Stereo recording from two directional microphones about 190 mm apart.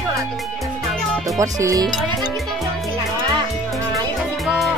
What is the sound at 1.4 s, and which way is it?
Speech, 15° right (ahead or behind).